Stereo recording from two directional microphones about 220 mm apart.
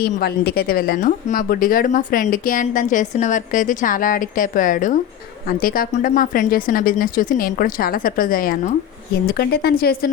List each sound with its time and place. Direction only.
0.0 s speech: 45° left (ahead or behind)